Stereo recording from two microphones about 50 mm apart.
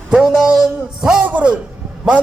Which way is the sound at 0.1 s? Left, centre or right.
Centre.